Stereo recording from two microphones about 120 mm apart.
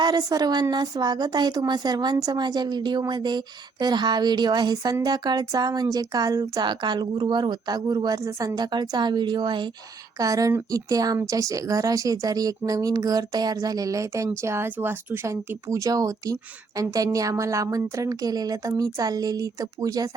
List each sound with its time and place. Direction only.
0.0 s speech: 35° right (ahead or behind)